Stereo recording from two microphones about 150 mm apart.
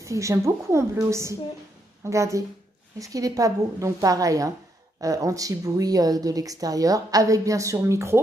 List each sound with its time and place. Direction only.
0.0 s a woman's voice: 20° right (ahead or behind)